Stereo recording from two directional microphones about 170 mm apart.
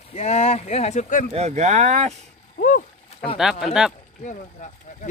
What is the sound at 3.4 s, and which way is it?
Speech, 5° right (ahead or behind).